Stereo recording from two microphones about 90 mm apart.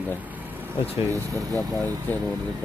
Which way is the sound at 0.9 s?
30° right (ahead or behind).